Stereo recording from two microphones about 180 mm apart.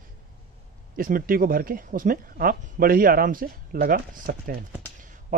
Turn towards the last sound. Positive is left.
turn(degrees=-45)  # may be behind; listen again after turning